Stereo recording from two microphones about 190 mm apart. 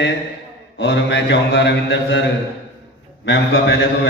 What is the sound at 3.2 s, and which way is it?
Speech, 75° left (ahead or behind).